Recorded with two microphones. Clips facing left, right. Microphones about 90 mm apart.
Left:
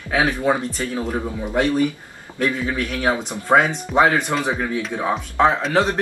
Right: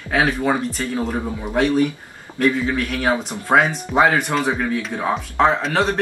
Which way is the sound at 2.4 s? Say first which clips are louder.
Right 3 dB; centre (ahead or behind).